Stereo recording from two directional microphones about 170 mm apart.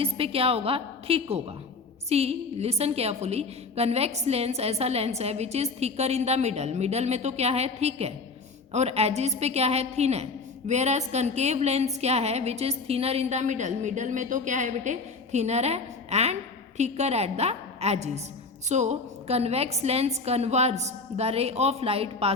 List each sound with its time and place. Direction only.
0.0 s a woman's voice: 35° right (ahead or behind)